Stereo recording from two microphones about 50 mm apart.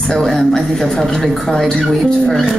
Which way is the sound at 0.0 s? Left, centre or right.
Centre.